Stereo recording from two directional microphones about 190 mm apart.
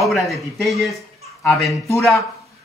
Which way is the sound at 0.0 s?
Centre (ahead or behind).